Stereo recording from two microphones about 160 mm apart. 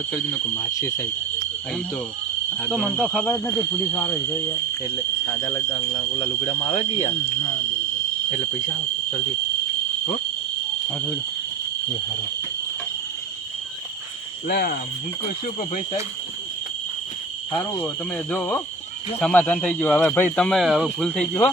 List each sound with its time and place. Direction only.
0.1 s speech: 15° left (ahead or behind)
2.6 s speech: 5° right (ahead or behind)
3.9 s speech: 10° left (ahead or behind)
5.7 s speech: 30° left (ahead or behind)
8.3 s speech: 45° left (ahead or behind)
14.4 s cricket: 65° left (ahead or behind)
15.7 s speech: 40° left (ahead or behind)
17.5 s speech: 10° left (ahead or behind)